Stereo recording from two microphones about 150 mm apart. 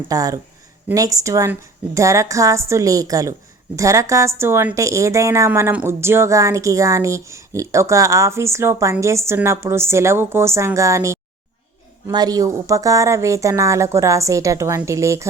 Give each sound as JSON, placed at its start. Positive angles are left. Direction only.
{"t": 0.1, "sound": "a woman's voice", "side_deg": -25}